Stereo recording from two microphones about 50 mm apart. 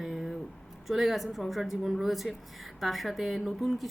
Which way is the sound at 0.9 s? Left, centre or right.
Centre.